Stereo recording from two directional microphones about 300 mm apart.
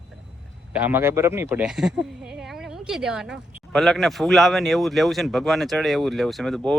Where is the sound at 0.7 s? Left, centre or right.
Centre.